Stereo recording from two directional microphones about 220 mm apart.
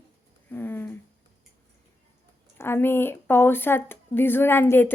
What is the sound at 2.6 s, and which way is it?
A woman's voice, 10° left (ahead or behind).